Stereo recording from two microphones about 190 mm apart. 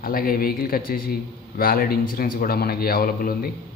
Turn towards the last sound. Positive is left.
turn(degrees=50)  # may be behind; listen again after turning